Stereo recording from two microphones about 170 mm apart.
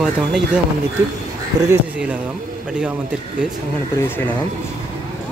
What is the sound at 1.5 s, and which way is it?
Speech, 20° right (ahead or behind).